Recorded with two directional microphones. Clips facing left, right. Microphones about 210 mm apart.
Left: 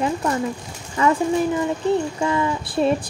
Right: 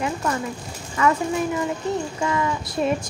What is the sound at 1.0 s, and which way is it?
Speech, 30° left (ahead or behind).